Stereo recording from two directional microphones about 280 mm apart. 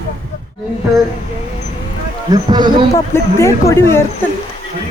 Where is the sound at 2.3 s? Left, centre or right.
Centre.